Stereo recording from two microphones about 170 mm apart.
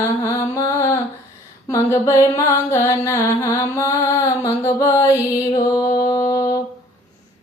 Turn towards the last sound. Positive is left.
turn(degrees=20)  # may be behind; listen again after turning